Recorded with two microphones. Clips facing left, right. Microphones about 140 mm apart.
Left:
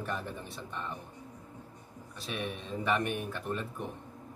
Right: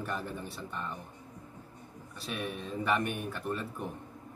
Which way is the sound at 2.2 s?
Centre (ahead or behind).